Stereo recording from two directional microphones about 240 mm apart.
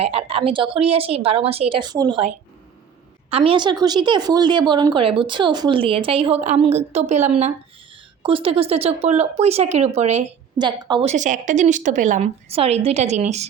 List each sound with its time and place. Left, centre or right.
0.0 s speech: right